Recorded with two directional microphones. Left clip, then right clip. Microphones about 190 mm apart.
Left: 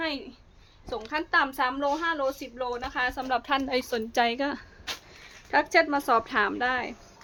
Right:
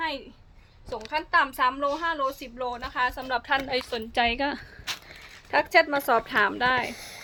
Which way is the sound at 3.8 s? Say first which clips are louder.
Left 1 dB; 35° left (ahead or behind).